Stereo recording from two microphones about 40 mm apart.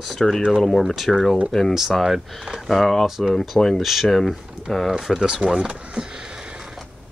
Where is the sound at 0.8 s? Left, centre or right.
Centre.